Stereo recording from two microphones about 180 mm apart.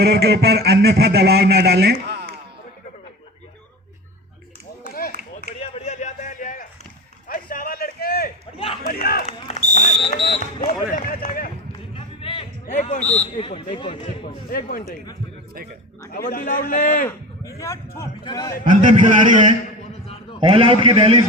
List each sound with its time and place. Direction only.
0.0 s a man's voice: 65° right (ahead or behind)
5.7 s a sound: 40° left (ahead or behind); by 8.3 s 55° left (ahead or behind)
8.5 s a sound: 35° left (ahead or behind)
8.9 s speech: 55° left (ahead or behind)
9.2 s a sound: 35° left (ahead or behind)
10.0 s a man's voice: 30° left (ahead or behind)
10.6 s speech: 50° left (ahead or behind)
11.9 s a sound: 30° left (ahead or behind)
12.6 s a man's voice: 45° left (ahead or behind)
14.5 s speech: 55° left (ahead or behind)
16.1 s speech: 55° left (ahead or behind)
17.1 s a man's voice: 15° left (ahead or behind)
18.6 s a man's voice: 45° right (ahead or behind)
20.4 s a man's voice: 30° right (ahead or behind)